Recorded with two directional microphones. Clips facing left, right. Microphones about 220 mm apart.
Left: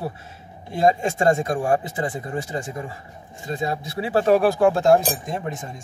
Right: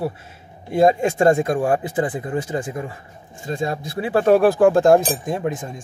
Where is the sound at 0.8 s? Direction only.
55° right (ahead or behind).